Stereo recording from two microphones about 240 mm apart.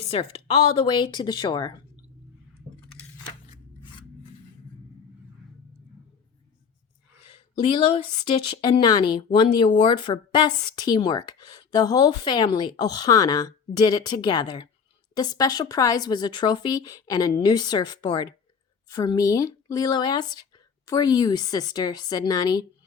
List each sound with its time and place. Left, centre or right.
0.1 s speech: left
7.3 s a woman's voice: centre